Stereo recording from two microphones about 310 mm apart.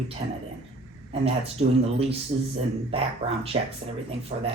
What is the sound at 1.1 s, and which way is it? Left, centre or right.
Speech, centre.